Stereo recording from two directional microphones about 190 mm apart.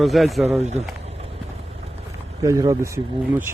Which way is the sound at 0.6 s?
35° right (ahead or behind).